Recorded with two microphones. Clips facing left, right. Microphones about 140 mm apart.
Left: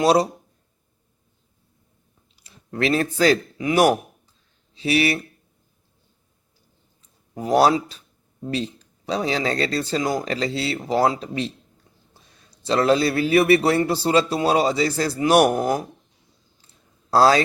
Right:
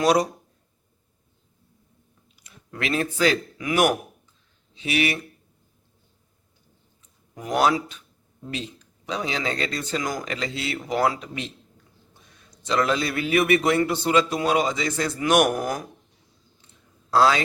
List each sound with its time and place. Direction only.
0.0 s speech: 30° left (ahead or behind)
2.3 s speech: 30° left (ahead or behind)
7.3 s a man's voice: 35° left (ahead or behind)
16.6 s a sound: 35° left (ahead or behind)